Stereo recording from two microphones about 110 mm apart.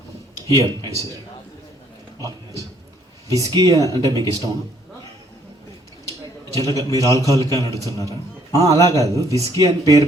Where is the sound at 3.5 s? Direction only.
30° right (ahead or behind).